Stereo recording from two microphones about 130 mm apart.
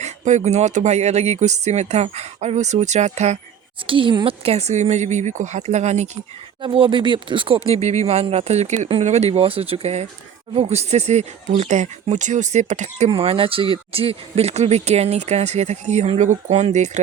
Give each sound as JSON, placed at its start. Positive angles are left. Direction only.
{"t": 0.0, "sound": "speech", "side_deg": -65}
{"t": 3.8, "sound": "speech", "side_deg": -40}
{"t": 6.6, "sound": "speech", "side_deg": -40}
{"t": 13.1, "sound": "speech", "side_deg": -45}